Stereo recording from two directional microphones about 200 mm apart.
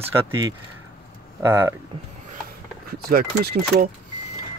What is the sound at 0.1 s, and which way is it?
Speech, 15° right (ahead or behind).